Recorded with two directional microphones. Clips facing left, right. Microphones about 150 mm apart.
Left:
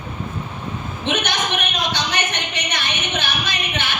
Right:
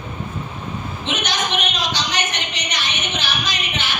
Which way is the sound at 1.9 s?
55° left (ahead or behind).